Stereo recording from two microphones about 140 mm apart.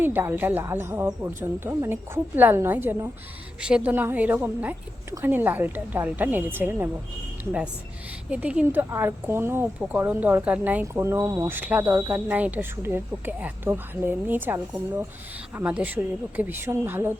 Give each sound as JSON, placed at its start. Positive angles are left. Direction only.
{"t": 0.0, "sound": "speech", "side_deg": -15}
{"t": 8.3, "sound": "speech", "side_deg": -10}